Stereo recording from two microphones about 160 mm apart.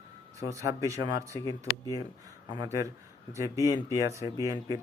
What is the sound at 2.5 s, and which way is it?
Speech, 25° right (ahead or behind).